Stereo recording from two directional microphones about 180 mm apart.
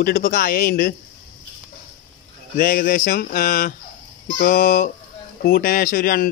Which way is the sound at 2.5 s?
50° left (ahead or behind).